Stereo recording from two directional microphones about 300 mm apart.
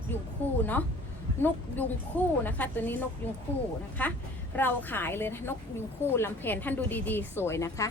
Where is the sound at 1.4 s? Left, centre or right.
Centre.